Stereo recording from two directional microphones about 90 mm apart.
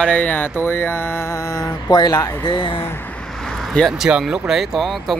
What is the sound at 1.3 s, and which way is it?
Mantra, 40° left (ahead or behind).